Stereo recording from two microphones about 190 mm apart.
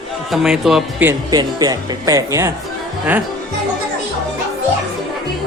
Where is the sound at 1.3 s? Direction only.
20° right (ahead or behind).